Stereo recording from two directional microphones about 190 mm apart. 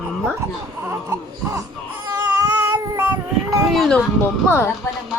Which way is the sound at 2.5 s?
15° right (ahead or behind).